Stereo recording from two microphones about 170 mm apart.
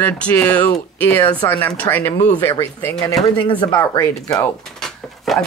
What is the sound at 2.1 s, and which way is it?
Speech, 40° left (ahead or behind).